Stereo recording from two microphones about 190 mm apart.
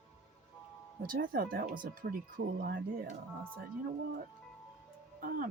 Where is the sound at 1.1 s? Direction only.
50° right (ahead or behind).